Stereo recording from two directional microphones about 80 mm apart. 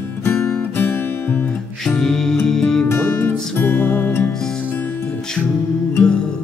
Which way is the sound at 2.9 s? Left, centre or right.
Left.